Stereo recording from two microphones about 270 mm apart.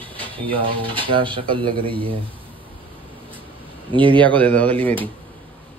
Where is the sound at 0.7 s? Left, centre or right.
Centre.